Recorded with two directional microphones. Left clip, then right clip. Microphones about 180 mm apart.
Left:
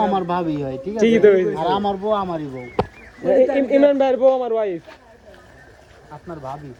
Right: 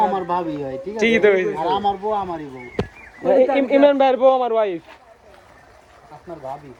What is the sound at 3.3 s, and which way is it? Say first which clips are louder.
A man's voice: even; 30° right (ahead or behind).